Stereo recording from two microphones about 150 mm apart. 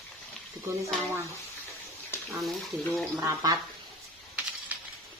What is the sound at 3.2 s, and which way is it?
Speech, 25° right (ahead or behind).